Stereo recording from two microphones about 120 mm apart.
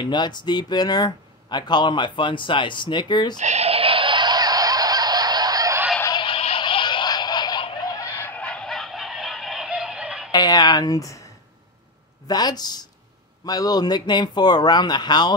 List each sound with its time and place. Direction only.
0.0 s speech: 40° left (ahead or behind)
3.3 s fowl: 70° right (ahead or behind); by 5.8 s 30° right (ahead or behind)
6.0 s music: 40° left (ahead or behind)
8.2 s fowl: 10° left (ahead or behind); by 10.3 s 5° right (ahead or behind)
10.3 s speech: 35° left (ahead or behind)
12.3 s speech: 35° left (ahead or behind)